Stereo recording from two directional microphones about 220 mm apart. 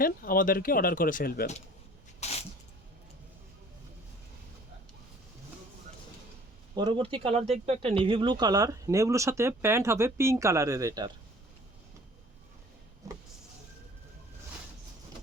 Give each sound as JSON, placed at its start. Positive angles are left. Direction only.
{"t": 0.0, "sound": "speech", "side_deg": 40}
{"t": 2.2, "sound": "a sound", "side_deg": 30}
{"t": 6.7, "sound": "speech", "side_deg": -20}
{"t": 13.0, "sound": "power windows", "side_deg": -15}